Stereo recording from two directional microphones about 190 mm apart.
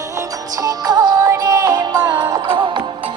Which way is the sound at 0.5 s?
20° right (ahead or behind).